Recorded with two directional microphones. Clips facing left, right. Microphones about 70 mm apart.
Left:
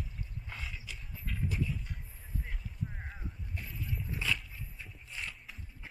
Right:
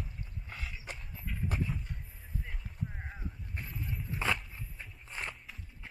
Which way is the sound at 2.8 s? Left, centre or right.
Centre.